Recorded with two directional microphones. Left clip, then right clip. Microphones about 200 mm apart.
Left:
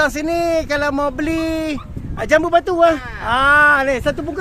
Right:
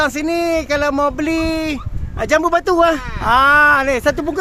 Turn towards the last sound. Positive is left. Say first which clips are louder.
# right 4 dB
turn(degrees=-35)  # may be behind; listen again after turning